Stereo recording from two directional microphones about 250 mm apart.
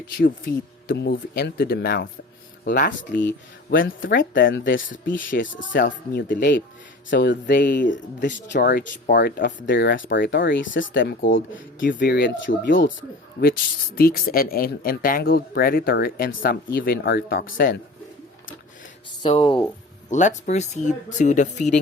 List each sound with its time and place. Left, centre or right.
0.2 s speech: left
4.4 s speech: left
7.9 s speech: left
19.2 s speech: centre